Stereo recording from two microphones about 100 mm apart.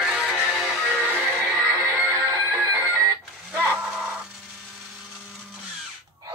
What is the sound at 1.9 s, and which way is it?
Music, 30° right (ahead or behind).